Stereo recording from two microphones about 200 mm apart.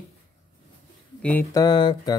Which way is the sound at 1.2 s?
15° left (ahead or behind).